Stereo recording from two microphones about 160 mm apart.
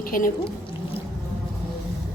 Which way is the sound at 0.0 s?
60° left (ahead or behind).